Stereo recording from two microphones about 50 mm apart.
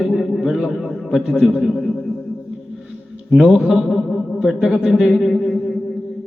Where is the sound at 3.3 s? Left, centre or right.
Centre.